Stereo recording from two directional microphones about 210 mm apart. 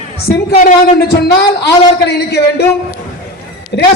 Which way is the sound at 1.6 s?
50° left (ahead or behind).